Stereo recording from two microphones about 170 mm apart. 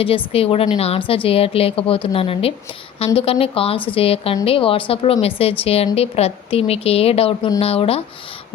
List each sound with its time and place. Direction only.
0.3 s speech: 35° left (ahead or behind)